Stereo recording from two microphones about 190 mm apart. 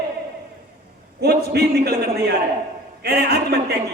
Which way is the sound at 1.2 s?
60° right (ahead or behind).